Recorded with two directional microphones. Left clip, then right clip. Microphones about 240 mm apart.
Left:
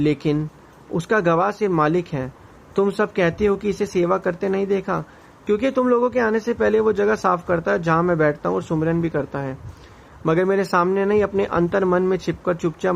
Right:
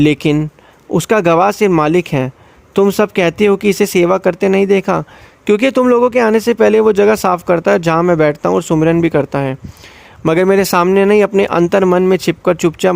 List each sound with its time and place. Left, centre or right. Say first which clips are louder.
0.0 s speech: right 8 dB; right